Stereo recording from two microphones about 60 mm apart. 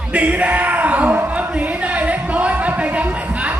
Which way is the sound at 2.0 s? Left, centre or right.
Right.